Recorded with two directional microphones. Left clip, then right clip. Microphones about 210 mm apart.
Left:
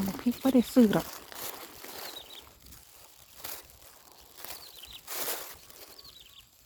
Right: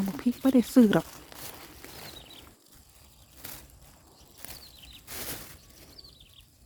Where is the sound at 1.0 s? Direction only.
50° left (ahead or behind).